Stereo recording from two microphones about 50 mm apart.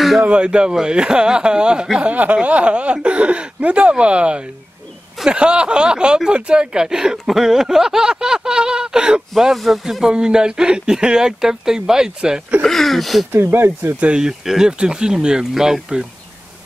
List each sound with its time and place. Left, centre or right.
0.2 s speech: right
9.4 s speech: centre
10.0 s speech: centre
12.6 s speech: centre
13.3 s speech: right
13.9 s speech: right
14.4 s speech: centre